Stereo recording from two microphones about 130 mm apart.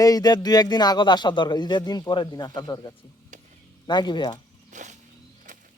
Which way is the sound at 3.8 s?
35° left (ahead or behind).